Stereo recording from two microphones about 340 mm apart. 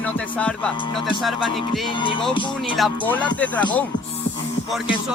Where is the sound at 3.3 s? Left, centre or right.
Centre.